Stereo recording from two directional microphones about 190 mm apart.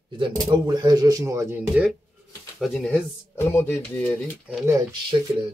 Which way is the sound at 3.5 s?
10° left (ahead or behind).